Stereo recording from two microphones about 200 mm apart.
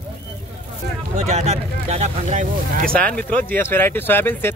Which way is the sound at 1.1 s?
35° right (ahead or behind).